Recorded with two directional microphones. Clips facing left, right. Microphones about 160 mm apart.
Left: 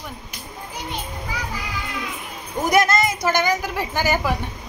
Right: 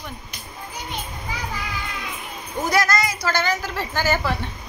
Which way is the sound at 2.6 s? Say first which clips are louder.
Left 3 dB; 20° left (ahead or behind).